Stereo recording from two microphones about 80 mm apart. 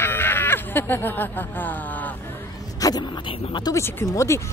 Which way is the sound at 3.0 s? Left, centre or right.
Left.